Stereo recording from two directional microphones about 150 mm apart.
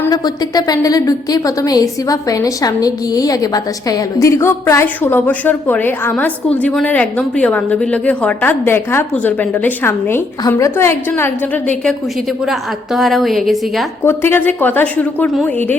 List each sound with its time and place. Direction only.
0.1 s a woman's voice: 25° left (ahead or behind)
12.5 s a woman's voice: centre (ahead or behind)
14.0 s a woman's voice: 15° left (ahead or behind)